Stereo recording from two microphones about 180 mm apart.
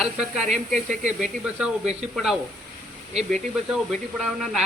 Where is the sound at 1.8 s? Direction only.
35° right (ahead or behind).